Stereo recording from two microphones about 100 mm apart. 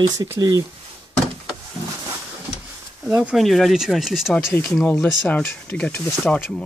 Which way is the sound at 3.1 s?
5° right (ahead or behind).